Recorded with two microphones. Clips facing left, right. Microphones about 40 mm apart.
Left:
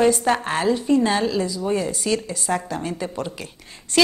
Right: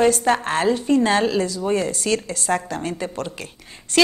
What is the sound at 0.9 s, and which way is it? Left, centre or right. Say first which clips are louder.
A woman's voice: right 2 dB; right.